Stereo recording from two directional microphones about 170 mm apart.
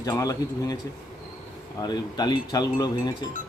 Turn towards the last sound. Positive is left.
turn(degrees=25)  # may be behind; listen again after turning